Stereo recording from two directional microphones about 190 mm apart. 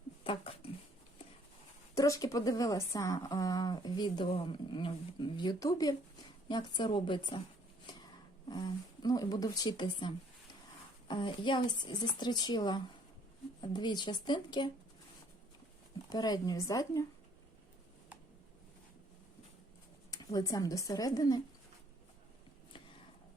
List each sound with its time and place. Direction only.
0.3 s a sound: 30° left (ahead or behind)
2.0 s a woman's voice: 20° left (ahead or behind)
8.4 s a woman's voice: 20° left (ahead or behind)
11.1 s a woman's voice: 25° left (ahead or behind)
16.0 s a woman's voice: 20° left (ahead or behind)
20.1 s speech: 20° left (ahead or behind)